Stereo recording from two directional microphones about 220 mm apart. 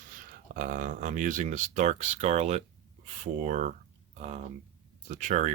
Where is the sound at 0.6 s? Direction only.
35° right (ahead or behind).